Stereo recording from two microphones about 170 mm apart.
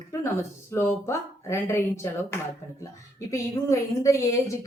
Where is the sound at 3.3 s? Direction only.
20° left (ahead or behind).